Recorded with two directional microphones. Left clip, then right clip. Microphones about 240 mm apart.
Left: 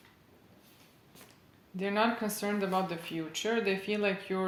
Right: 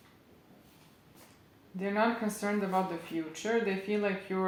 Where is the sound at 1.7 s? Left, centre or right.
Left.